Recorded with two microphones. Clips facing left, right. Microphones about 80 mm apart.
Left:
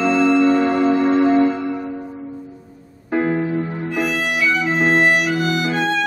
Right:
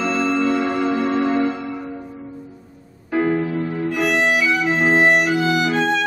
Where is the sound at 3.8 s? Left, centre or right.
Centre.